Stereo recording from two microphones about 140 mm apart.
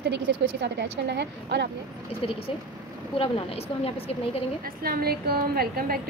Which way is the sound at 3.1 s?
40° left (ahead or behind).